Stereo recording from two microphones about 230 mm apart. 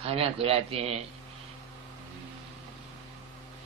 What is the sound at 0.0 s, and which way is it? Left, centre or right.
Speech, right.